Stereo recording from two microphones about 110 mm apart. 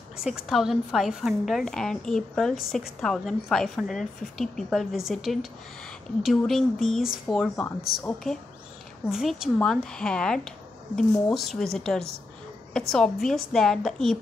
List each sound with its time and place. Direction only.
0.2 s a woman's voice: 5° right (ahead or behind)
7.6 s speech: 20° left (ahead or behind)
9.1 s a woman's voice: 5° right (ahead or behind)